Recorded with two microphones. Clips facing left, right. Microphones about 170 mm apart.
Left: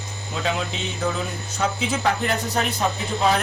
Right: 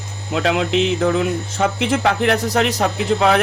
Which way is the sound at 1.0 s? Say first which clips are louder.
Right 8 dB; 60° right (ahead or behind).